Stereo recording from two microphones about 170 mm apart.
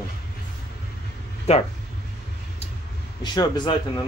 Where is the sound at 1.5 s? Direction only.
40° left (ahead or behind).